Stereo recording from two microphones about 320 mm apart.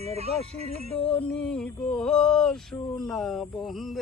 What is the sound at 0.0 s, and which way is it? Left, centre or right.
Speech, centre.